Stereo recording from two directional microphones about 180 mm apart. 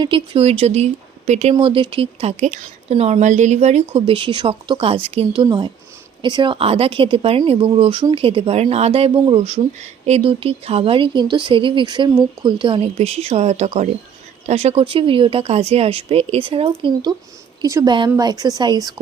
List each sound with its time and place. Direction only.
0.0 s speech: 30° right (ahead or behind)